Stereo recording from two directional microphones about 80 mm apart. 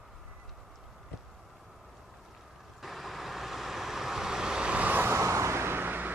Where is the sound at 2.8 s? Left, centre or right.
Centre; by 5.1 s right.